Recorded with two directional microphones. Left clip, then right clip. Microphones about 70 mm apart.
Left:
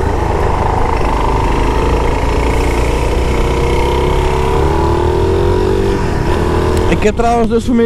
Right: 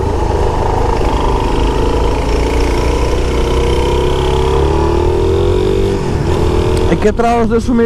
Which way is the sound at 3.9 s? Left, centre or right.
Right.